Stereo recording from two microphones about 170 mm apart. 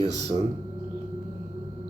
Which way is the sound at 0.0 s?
20° left (ahead or behind).